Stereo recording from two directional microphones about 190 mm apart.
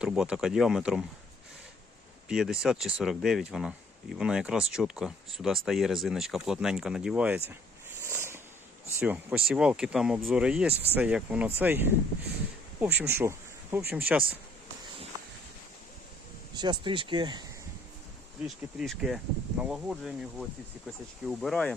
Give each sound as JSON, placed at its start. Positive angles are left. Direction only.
{"t": 0.0, "sound": "speech", "side_deg": -5}
{"t": 2.3, "sound": "speech", "side_deg": -5}
{"t": 8.0, "sound": "a sound", "side_deg": -15}
{"t": 9.0, "sound": "speech", "side_deg": -10}
{"t": 16.6, "sound": "speech", "side_deg": -25}
{"t": 18.4, "sound": "speech", "side_deg": 0}